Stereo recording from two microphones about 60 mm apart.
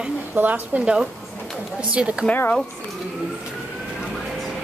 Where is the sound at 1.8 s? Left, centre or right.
Right.